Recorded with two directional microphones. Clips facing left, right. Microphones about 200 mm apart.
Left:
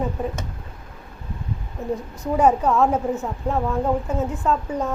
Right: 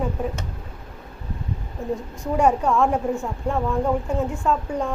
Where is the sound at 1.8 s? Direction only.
20° left (ahead or behind).